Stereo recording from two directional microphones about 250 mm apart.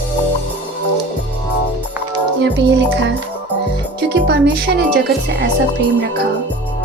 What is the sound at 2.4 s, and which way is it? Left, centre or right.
Speech, right.